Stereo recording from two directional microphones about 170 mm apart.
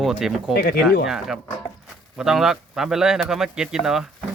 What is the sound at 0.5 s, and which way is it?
Speech, 65° left (ahead or behind).